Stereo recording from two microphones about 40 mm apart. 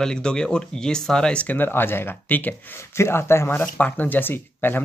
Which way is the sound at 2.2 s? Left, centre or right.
Left.